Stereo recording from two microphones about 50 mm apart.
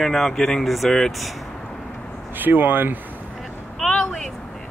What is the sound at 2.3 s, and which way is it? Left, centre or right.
Speech, right.